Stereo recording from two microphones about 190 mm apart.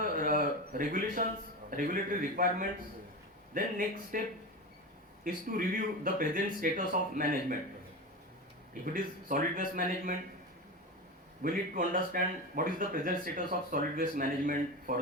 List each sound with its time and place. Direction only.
0.0 s a sound: 45° right (ahead or behind)
1.7 s speech: 45° right (ahead or behind)
5.2 s speech: 45° right (ahead or behind)
8.8 s speech: 45° right (ahead or behind)
11.4 s speech: 45° right (ahead or behind)